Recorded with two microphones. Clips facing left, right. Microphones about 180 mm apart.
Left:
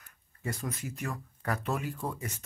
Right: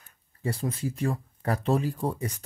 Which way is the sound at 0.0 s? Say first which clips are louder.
Right 6 dB; 30° right (ahead or behind).